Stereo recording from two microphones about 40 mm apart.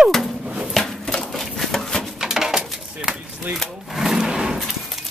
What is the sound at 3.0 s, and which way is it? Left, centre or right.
Speech, right.